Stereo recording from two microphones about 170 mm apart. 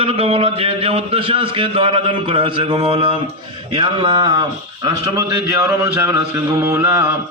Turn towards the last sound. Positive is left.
turn(degrees=-15)  # may be behind; listen again after turning